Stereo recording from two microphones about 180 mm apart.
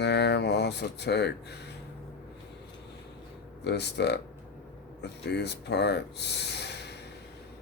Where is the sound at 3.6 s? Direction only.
70° left (ahead or behind).